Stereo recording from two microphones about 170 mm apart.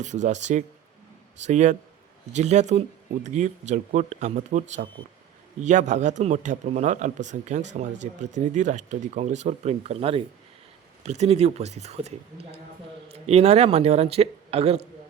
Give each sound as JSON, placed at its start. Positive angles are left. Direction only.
{"t": 0.0, "sound": "a man's voice", "side_deg": -45}